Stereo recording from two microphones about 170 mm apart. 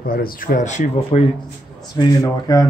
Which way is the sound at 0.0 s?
60° left (ahead or behind).